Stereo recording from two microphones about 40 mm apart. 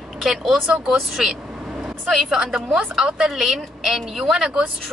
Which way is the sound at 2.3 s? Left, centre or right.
Centre.